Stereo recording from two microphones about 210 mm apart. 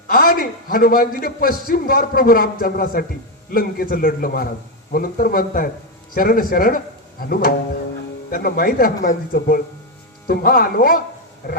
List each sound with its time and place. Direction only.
0.1 s a man's voice: 45° left (ahead or behind)